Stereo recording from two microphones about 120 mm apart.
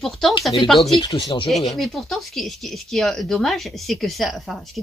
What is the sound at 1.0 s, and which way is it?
Speech, 35° left (ahead or behind).